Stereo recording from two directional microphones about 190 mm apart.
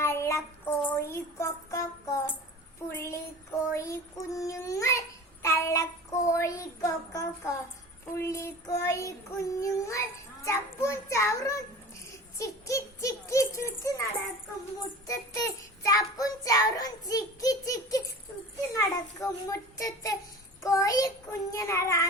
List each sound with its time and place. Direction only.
0.0 s child singing: 15° left (ahead or behind)
12.4 s a sound: 15° left (ahead or behind)
15.0 s child singing: 15° left (ahead or behind)